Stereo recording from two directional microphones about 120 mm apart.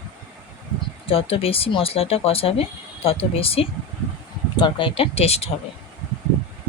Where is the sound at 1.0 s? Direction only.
50° left (ahead or behind).